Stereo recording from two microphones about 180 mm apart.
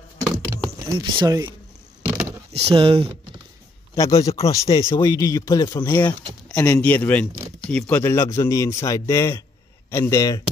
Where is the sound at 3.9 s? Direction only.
20° left (ahead or behind).